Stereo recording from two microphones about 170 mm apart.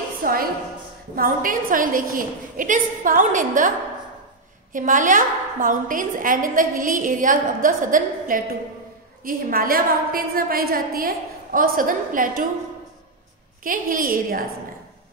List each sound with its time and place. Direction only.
0.2 s a woman's voice: 60° right (ahead or behind)
4.7 s a woman's voice: 50° right (ahead or behind)
13.7 s a woman's voice: 55° right (ahead or behind)